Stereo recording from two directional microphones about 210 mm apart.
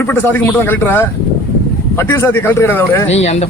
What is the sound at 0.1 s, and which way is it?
Speech, 10° left (ahead or behind).